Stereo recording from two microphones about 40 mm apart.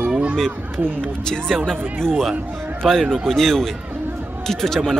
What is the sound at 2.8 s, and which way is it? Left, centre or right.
A man's voice, centre.